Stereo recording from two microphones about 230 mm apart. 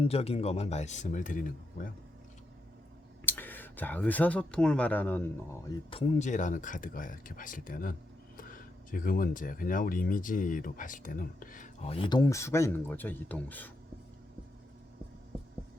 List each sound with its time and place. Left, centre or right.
0.0 s speech: left
3.2 s speech: centre
5.9 s speech: left; by 13.7 s centre